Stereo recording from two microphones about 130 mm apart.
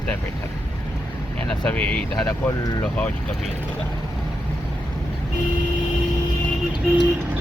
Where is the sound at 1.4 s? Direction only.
5° left (ahead or behind).